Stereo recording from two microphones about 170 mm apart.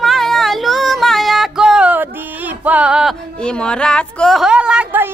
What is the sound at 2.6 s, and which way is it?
Music, 5° right (ahead or behind).